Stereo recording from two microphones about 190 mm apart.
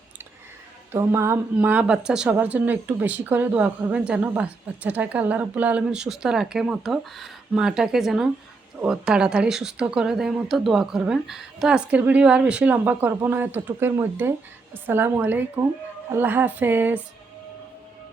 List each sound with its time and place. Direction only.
0.9 s speech: 15° right (ahead or behind)